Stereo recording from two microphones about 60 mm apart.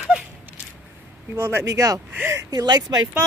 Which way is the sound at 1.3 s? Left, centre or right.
Right.